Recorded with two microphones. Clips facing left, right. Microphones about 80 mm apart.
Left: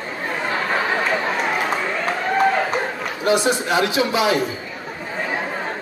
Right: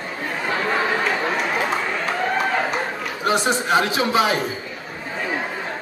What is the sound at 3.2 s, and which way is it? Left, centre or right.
A man's voice, right.